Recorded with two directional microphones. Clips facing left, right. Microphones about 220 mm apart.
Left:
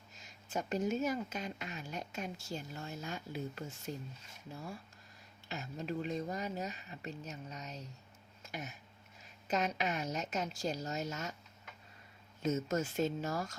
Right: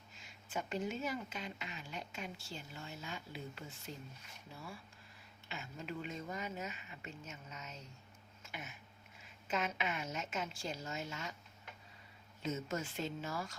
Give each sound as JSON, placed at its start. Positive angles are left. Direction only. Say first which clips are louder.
{"t": 0.2, "sound": "speech", "louder": "left 3 dB", "side_deg": 40}
{"t": 8.4, "sound": "a sound", "louder": "left 5 dB", "side_deg": 40}
{"t": 9.5, "sound": "speech", "louder": "left 4 dB", "side_deg": 40}
{"t": 12.4, "sound": "speech", "louder": "left 6 dB", "side_deg": 45}